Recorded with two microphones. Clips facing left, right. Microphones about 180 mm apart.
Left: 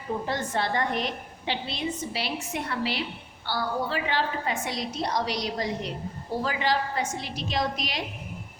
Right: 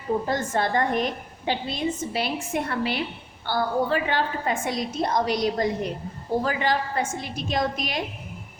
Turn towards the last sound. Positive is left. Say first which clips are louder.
# right 3 dB
turn(degrees=-50)  # may be behind; listen again after turning